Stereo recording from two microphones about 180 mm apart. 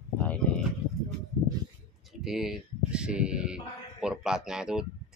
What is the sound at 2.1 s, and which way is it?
Speech, centre (ahead or behind).